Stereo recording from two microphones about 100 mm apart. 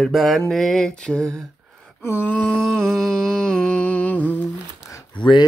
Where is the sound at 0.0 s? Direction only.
Centre (ahead or behind).